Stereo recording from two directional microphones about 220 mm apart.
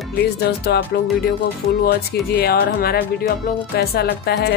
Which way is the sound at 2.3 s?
45° left (ahead or behind).